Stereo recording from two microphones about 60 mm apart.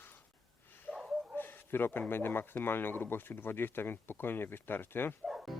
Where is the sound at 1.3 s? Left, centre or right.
Left.